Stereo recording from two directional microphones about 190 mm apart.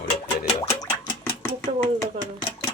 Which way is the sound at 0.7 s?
15° left (ahead or behind).